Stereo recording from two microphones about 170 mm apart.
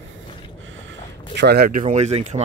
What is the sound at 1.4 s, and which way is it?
Speech, 70° right (ahead or behind).